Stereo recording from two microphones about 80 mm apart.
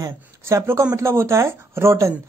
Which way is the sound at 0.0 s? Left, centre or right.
Right.